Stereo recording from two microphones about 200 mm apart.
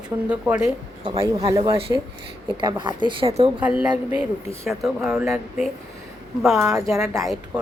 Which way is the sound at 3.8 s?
5° right (ahead or behind).